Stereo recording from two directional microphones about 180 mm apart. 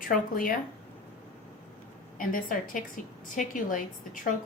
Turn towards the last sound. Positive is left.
turn(degrees=45)  # may be behind; listen again after turning